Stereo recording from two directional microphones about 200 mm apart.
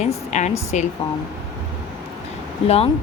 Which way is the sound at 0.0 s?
35° left (ahead or behind).